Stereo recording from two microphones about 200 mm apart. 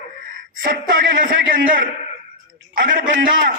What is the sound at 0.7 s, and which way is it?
A man's voice, 45° right (ahead or behind).